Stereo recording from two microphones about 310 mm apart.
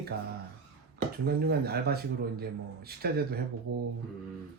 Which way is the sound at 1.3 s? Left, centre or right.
Right.